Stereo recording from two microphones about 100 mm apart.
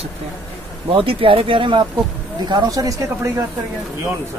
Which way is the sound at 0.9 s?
65° right (ahead or behind).